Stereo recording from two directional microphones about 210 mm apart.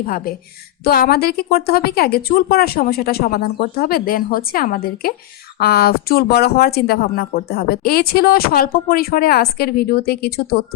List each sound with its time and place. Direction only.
0.0 s speech: 45° left (ahead or behind)